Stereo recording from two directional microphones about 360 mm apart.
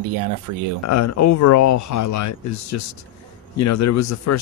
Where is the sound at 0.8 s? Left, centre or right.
Left.